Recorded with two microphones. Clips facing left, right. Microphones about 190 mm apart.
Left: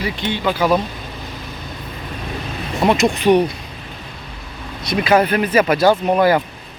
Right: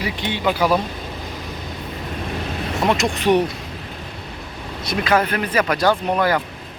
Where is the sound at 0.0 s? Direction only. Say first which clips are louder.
Left 1 dB; 15° right (ahead or behind).